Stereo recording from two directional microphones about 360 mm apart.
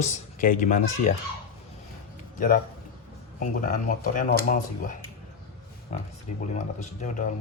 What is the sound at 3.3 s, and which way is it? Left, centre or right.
Speech, left.